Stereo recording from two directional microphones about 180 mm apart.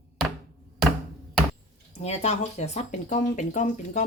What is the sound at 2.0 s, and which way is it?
A woman's voice, 35° left (ahead or behind).